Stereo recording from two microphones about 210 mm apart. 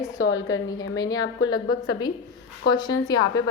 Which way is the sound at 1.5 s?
90° left.